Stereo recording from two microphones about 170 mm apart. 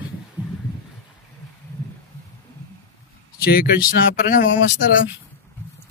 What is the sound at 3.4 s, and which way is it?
Speech, 65° left (ahead or behind).